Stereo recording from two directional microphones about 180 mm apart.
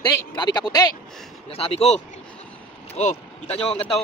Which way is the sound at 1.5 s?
35° left (ahead or behind).